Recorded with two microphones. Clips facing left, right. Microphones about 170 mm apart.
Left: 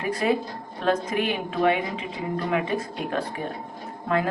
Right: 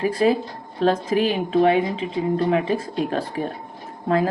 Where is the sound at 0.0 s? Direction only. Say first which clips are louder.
Right 5 dB; 30° right (ahead or behind).